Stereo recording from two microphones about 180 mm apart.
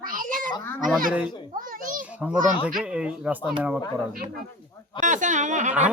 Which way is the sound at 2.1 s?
5° right (ahead or behind).